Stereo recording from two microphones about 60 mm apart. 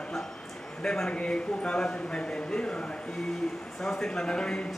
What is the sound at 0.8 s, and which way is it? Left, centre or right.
A man's voice, centre.